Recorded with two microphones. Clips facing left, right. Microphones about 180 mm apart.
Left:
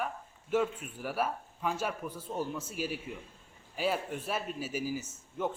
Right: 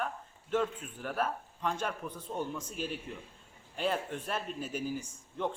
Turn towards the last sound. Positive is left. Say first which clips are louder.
# left 1 dB
turn(degrees=5)  # may be behind; listen again after turning